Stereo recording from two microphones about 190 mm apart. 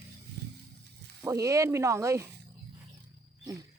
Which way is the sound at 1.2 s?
15° right (ahead or behind).